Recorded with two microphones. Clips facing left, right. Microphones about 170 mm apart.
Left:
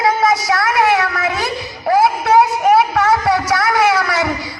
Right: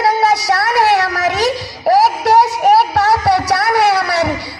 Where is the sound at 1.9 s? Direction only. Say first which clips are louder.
Right 2 dB; 35° right (ahead or behind).